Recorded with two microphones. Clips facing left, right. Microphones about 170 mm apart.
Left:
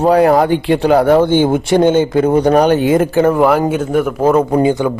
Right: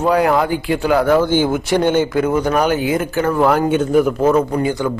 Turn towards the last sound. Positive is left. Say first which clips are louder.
# left 5 dB
turn(degrees=20)  # may be behind; listen again after turning